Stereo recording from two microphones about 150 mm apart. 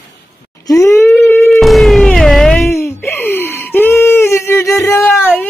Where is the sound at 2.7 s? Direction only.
15° left (ahead or behind).